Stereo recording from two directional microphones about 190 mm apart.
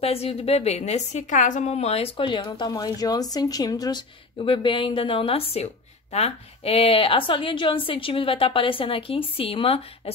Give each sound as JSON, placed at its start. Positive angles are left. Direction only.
{"t": 0.0, "sound": "a woman's voice", "side_deg": 30}